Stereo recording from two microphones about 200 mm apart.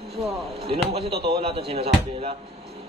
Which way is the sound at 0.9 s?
30° right (ahead or behind).